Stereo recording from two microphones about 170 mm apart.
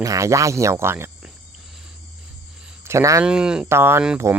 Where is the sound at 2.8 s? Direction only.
15° right (ahead or behind).